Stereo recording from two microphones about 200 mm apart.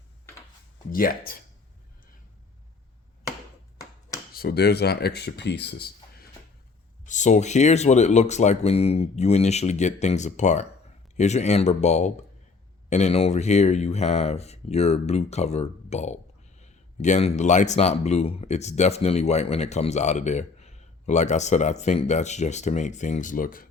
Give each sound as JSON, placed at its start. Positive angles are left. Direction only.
{"t": 0.9, "sound": "speech", "side_deg": 45}
{"t": 4.4, "sound": "speech", "side_deg": 50}
{"t": 7.0, "sound": "speech", "side_deg": 40}